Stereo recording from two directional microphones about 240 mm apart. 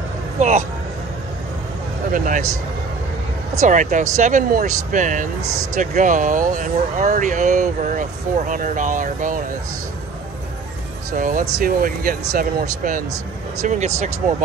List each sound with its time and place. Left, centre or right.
0.4 s speech: right
2.1 s speech: right
3.6 s speech: right
11.1 s speech: right